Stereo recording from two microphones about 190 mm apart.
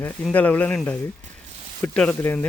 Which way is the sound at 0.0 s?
10° left (ahead or behind).